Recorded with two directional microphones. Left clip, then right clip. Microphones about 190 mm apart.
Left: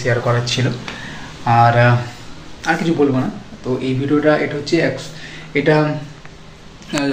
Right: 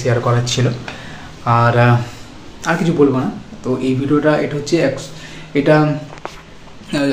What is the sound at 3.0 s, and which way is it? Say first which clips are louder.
Speech: right 3 dB; 20° right (ahead or behind).